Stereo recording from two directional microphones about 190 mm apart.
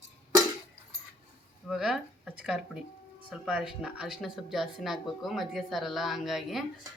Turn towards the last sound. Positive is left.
turn(degrees=0)  # may be behind; listen again after turning